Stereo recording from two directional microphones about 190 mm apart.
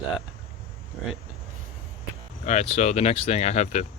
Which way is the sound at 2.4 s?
35° left (ahead or behind).